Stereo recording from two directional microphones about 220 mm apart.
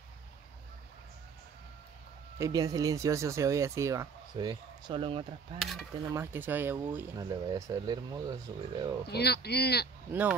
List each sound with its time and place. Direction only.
2.3 s speech: 15° right (ahead or behind)
5.6 s cutlery: centre (ahead or behind)
6.1 s speech: 10° right (ahead or behind)
9.0 s speech: 45° left (ahead or behind)